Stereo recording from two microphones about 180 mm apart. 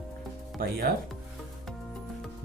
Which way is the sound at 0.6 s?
55° right (ahead or behind).